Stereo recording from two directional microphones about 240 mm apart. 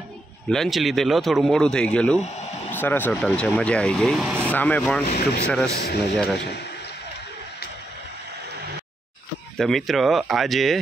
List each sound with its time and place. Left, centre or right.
0.5 s speech: centre
5.1 s speech: left
6.1 s speech: centre
9.6 s speech: centre